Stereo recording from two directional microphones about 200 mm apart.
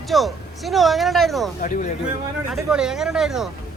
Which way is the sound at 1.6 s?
40° left (ahead or behind).